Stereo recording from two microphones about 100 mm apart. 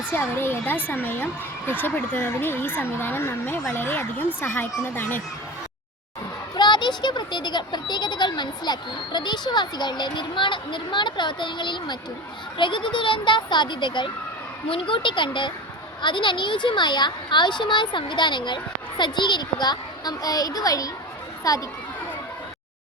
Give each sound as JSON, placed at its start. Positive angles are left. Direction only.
{"t": 0.0, "sound": "speech", "side_deg": 20}
{"t": 6.6, "sound": "speech", "side_deg": 50}
{"t": 14.7, "sound": "speech", "side_deg": 60}